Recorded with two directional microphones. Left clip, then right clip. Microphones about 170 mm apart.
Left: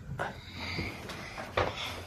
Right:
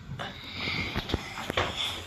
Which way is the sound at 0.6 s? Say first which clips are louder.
Right 8 dB; 5° left (ahead or behind).